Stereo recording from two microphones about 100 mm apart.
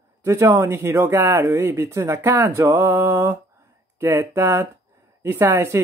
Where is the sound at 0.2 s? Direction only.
30° right (ahead or behind).